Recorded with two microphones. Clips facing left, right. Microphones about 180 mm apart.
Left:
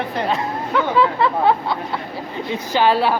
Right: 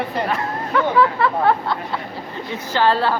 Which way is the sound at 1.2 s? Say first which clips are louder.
Left 1 dB; 15° left (ahead or behind).